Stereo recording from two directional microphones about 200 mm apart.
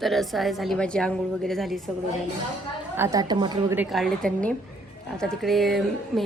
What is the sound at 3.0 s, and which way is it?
Speech, 20° right (ahead or behind).